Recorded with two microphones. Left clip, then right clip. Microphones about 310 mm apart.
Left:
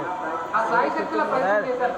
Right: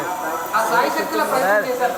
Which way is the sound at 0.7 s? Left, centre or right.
Centre.